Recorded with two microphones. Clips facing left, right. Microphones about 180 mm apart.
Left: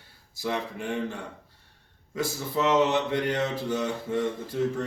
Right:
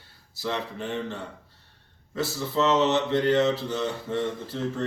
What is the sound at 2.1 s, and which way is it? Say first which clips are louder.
Speech: right 2 dB; 15° left (ahead or behind).